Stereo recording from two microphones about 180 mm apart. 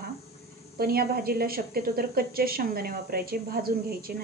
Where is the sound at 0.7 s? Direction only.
60° right (ahead or behind).